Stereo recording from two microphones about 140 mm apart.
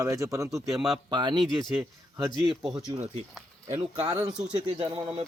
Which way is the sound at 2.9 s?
25° right (ahead or behind).